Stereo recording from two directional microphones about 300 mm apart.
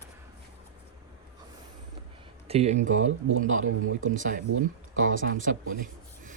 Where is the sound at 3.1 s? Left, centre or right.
Right.